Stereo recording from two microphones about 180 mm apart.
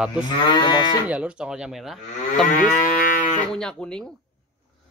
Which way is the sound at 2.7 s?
50° left (ahead or behind).